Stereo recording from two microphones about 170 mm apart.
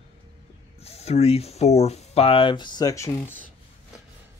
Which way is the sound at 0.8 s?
40° left (ahead or behind).